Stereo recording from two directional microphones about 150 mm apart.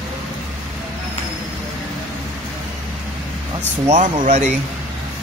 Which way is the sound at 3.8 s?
60° right (ahead or behind).